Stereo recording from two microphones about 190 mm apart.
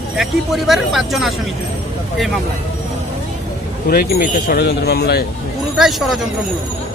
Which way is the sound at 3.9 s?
50° left (ahead or behind).